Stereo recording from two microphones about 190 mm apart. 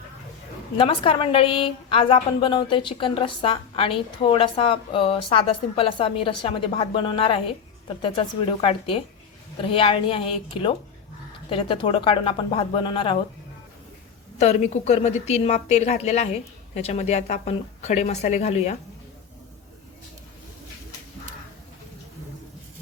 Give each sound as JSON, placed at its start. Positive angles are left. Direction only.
{"t": 0.8, "sound": "a woman's voice", "side_deg": 30}
{"t": 14.3, "sound": "a woman's voice", "side_deg": 35}